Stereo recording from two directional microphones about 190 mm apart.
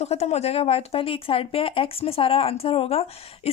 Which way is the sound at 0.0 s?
35° left (ahead or behind).